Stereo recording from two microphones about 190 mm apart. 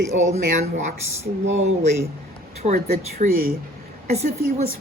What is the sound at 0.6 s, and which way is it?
Speech, 35° right (ahead or behind).